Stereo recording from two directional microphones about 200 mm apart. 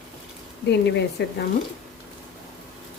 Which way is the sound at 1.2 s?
55° left (ahead or behind).